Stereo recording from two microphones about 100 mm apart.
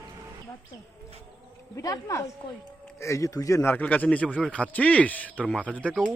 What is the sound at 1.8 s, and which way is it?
A man's voice, 35° left (ahead or behind).